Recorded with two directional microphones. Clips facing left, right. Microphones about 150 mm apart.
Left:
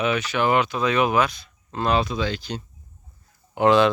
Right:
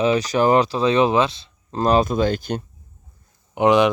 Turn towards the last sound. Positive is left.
turn(degrees=-20)  # may be behind; listen again after turning